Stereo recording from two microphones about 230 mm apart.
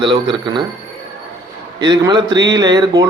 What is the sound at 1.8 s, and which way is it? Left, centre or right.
Speech, centre.